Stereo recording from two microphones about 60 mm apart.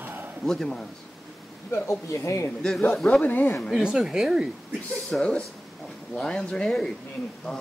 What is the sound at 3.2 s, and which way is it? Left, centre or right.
Speech, left.